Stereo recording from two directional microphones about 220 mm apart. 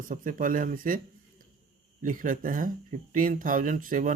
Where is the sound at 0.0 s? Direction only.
40° right (ahead or behind).